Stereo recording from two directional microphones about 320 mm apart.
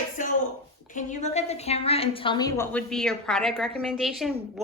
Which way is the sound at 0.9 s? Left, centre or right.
Left.